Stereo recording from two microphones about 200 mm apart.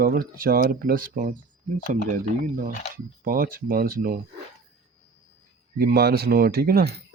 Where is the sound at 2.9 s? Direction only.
45° right (ahead or behind).